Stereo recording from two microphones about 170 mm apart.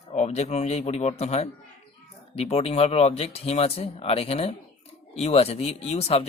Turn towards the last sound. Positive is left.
turn(degrees=40)  # may be behind; listen again after turning